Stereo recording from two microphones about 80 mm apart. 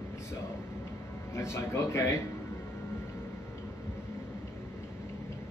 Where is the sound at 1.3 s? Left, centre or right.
Left.